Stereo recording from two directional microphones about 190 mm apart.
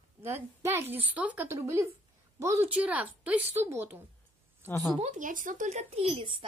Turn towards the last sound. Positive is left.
turn(degrees=-25)  # may be behind; listen again after turning